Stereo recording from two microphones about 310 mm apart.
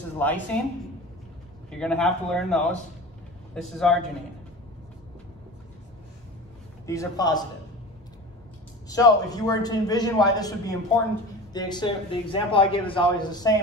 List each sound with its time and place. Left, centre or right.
0.2 s a man's voice: centre
1.7 s a man's voice: centre
3.7 s a man's voice: centre
6.9 s a man's voice: centre
8.8 s a man's voice: centre